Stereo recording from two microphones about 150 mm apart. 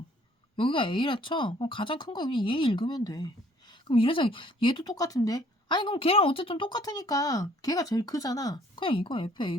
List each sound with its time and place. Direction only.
0.5 s speech: 35° left (ahead or behind)
3.7 s a woman's voice: 35° left (ahead or behind)
8.8 s speech: 35° left (ahead or behind)